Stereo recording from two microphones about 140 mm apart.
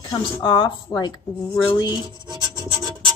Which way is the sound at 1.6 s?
35° left (ahead or behind).